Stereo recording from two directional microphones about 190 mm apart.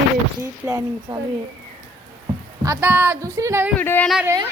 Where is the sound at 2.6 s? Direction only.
15° right (ahead or behind).